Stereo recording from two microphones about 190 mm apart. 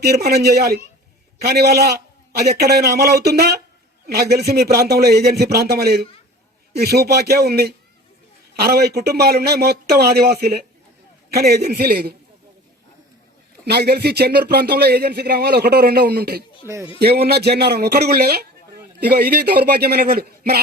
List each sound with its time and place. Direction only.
0.0 s speech: 55° right (ahead or behind)
13.7 s speech: 55° right (ahead or behind)
16.6 s speech: 15° right (ahead or behind)
17.0 s a man's voice: 55° right (ahead or behind)